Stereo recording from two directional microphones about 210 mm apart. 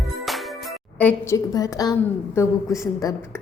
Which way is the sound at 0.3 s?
Centre (ahead or behind).